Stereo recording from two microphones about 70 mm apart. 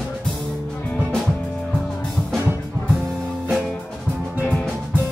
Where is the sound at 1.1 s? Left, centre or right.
Centre.